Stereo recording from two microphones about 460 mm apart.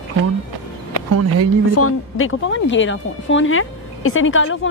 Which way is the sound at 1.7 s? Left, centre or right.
Left.